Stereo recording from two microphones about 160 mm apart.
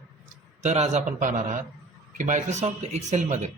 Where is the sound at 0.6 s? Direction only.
45° right (ahead or behind).